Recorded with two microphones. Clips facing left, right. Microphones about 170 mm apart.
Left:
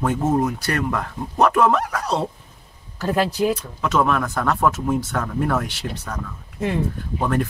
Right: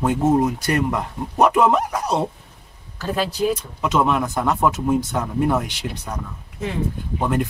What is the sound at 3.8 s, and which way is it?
Speech, 20° right (ahead or behind).